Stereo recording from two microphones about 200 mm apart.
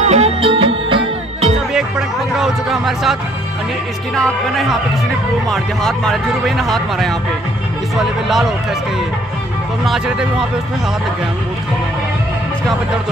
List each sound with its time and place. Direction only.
0.0 s music: 30° right (ahead or behind)
1.7 s speech: centre (ahead or behind)
9.8 s speech: 5° right (ahead or behind)